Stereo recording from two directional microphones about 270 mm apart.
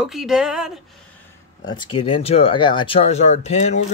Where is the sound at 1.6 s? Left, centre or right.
Centre.